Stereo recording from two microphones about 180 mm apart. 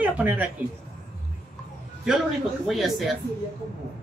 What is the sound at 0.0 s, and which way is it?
Speech, 10° right (ahead or behind).